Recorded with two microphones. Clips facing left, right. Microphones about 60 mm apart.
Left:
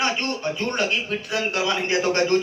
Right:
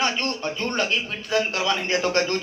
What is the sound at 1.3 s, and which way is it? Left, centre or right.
Speech, centre.